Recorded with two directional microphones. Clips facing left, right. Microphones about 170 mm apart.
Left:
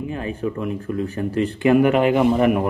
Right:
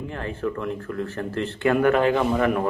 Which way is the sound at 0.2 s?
15° left (ahead or behind).